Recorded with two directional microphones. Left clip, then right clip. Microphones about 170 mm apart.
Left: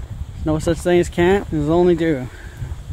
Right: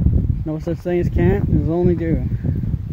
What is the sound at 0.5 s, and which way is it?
Speech, 15° left (ahead or behind).